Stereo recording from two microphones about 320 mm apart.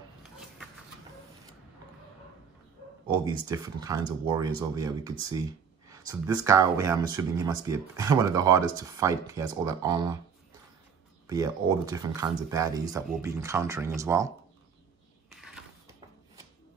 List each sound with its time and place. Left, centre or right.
3.1 s speech: centre
11.2 s speech: centre
15.2 s a sound: centre